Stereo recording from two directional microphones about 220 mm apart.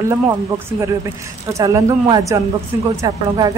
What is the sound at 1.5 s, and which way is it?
Speech, 15° right (ahead or behind).